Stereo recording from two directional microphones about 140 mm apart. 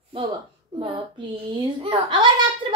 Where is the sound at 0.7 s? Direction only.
40° right (ahead or behind).